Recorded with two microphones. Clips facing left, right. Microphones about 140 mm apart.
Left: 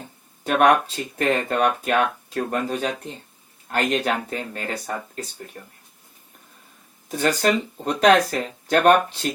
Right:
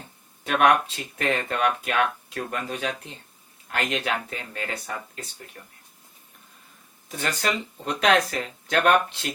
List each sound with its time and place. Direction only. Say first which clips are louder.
0.4 s speech: left 3 dB; 40° left (ahead or behind)
7.1 s speech: left 7 dB; 40° left (ahead or behind)